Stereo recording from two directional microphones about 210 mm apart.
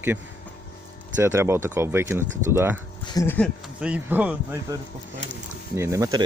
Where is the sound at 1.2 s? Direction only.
10° right (ahead or behind).